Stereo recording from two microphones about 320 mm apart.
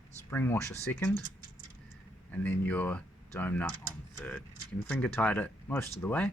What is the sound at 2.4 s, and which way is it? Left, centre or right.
Speech, centre.